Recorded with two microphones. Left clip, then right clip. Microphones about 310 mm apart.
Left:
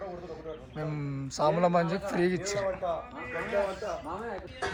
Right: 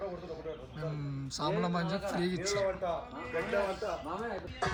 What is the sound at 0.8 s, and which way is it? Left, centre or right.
Speech, centre.